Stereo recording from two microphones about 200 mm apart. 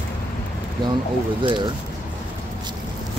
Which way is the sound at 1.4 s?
25° right (ahead or behind).